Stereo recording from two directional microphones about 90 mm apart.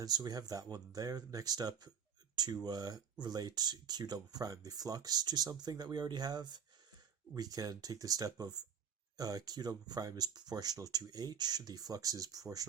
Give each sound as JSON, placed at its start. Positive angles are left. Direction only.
{"t": 0.0, "sound": "speech", "side_deg": -50}